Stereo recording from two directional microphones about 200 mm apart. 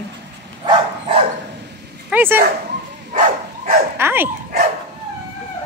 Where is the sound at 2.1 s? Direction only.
10° right (ahead or behind).